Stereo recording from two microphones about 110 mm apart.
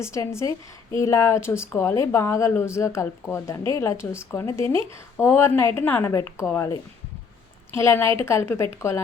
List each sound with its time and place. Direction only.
0.0 s a woman's voice: 25° left (ahead or behind)
7.8 s a woman's voice: 25° left (ahead or behind)